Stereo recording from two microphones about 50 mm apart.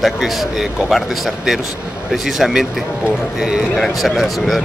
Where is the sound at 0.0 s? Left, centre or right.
Centre.